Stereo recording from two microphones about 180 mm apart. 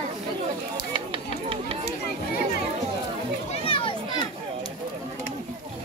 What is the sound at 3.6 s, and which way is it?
Children playing, 30° left (ahead or behind).